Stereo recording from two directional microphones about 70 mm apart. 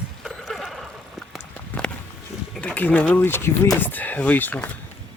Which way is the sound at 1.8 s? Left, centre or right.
Centre.